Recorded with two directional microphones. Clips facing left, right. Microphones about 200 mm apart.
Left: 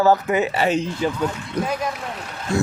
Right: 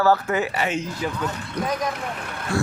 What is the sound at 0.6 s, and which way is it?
Speech, 35° left (ahead or behind).